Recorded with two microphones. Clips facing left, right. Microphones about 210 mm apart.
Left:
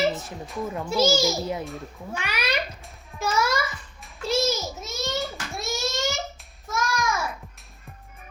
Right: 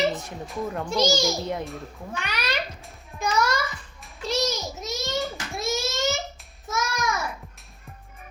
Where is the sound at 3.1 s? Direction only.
5° left (ahead or behind).